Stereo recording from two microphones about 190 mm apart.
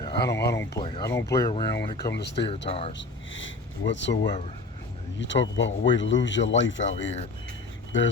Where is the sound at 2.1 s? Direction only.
65° left (ahead or behind).